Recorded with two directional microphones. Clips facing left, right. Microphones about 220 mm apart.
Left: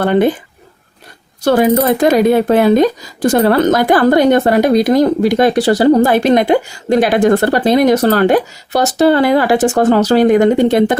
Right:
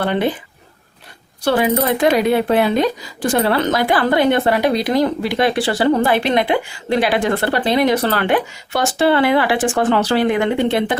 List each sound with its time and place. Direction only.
0.0 s speech: 45° left (ahead or behind)
1.4 s speech: 45° left (ahead or behind)